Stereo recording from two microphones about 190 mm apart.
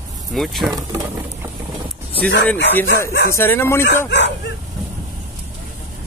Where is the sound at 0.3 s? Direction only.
Centre (ahead or behind).